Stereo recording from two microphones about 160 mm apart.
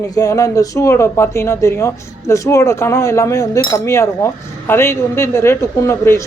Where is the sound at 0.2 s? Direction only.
20° left (ahead or behind).